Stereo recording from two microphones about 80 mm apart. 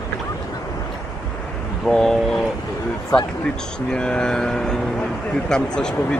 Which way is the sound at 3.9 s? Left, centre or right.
Centre.